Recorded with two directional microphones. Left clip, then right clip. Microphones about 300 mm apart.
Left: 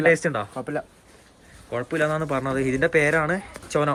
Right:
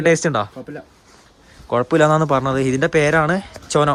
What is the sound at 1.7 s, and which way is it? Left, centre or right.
A man's voice, centre.